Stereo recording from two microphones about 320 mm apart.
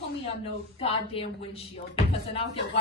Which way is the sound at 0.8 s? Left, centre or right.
Centre.